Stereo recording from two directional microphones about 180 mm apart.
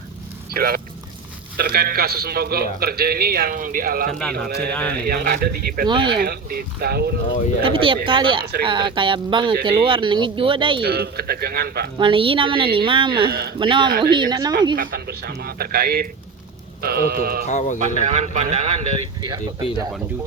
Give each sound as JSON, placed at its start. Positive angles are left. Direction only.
{"t": 0.5, "sound": "a man's voice", "side_deg": -55}
{"t": 4.2, "sound": "speech", "side_deg": 5}
{"t": 4.4, "sound": "a man's voice", "side_deg": -60}
{"t": 4.7, "sound": "speech", "side_deg": 5}
{"t": 5.0, "sound": "a man's voice", "side_deg": -55}
{"t": 5.9, "sound": "a woman's voice", "side_deg": -25}
{"t": 6.1, "sound": "a man's voice", "side_deg": -60}
{"t": 7.6, "sound": "a woman's voice", "side_deg": -30}
{"t": 10.8, "sound": "a man's voice", "side_deg": -60}
{"t": 11.9, "sound": "a woman's voice", "side_deg": -30}
{"t": 14.8, "sound": "a man's voice", "side_deg": -55}
{"t": 17.4, "sound": "speech", "side_deg": 40}
{"t": 18.0, "sound": "speech", "side_deg": -40}